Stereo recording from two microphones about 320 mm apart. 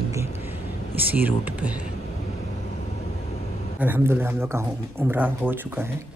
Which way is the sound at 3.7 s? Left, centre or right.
Centre.